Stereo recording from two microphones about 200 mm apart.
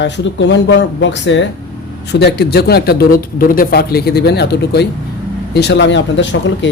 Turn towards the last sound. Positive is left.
turn(degrees=65)  # may be behind; listen again after turning